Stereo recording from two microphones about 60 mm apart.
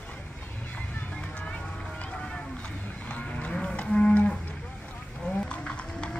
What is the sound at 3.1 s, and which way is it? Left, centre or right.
Cattle, left.